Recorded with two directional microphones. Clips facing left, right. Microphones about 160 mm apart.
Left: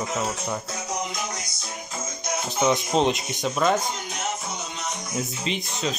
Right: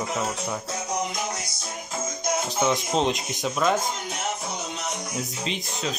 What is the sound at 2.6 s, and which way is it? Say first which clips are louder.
Speech: left 4 dB; centre (ahead or behind).